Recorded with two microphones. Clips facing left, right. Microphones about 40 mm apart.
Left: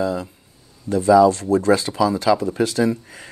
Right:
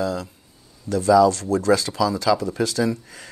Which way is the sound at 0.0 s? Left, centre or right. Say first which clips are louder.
Left 2 dB; left.